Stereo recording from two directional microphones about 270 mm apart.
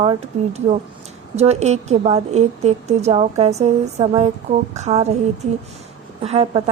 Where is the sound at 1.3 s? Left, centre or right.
Right.